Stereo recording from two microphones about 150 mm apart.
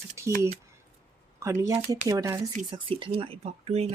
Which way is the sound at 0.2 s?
20° right (ahead or behind).